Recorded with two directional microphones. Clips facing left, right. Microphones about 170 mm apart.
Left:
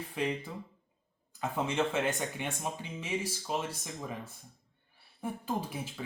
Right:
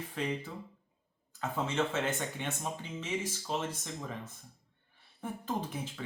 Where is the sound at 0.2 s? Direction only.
10° left (ahead or behind).